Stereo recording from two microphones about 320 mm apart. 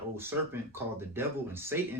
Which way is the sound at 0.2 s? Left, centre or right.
Centre.